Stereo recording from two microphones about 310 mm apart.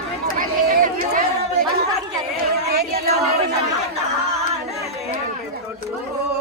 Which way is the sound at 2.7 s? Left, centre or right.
Right.